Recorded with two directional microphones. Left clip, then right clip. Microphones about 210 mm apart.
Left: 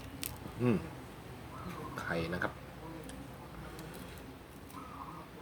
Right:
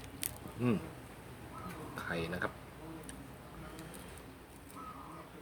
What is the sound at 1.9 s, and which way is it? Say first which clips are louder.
Speech: left 2 dB; 15° right (ahead or behind).